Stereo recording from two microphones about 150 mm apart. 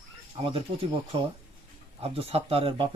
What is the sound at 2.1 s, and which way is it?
Speech, 40° right (ahead or behind).